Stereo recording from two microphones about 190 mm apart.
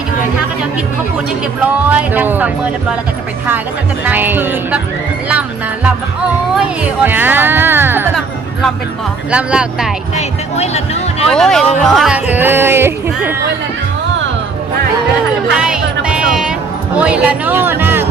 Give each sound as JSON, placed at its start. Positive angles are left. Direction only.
{"t": 1.9, "sound": "speech", "side_deg": -10}
{"t": 4.0, "sound": "speech", "side_deg": -10}
{"t": 9.3, "sound": "speech", "side_deg": -5}
{"t": 10.2, "sound": "speech", "side_deg": 35}
{"t": 11.3, "sound": "speech", "side_deg": 0}
{"t": 15.5, "sound": "music", "side_deg": -5}
{"t": 16.9, "sound": "speech", "side_deg": -5}